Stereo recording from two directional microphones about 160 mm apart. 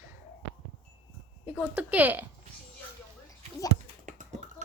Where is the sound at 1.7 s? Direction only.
10° right (ahead or behind).